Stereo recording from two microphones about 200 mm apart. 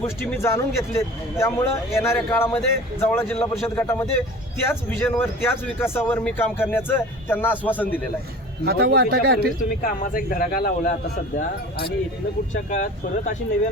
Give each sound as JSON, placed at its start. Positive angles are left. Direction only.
{"t": 0.2, "sound": "speech", "side_deg": 10}
{"t": 8.6, "sound": "speech", "side_deg": -50}
{"t": 9.6, "sound": "speech", "side_deg": 40}
{"t": 12.7, "sound": "speech", "side_deg": 40}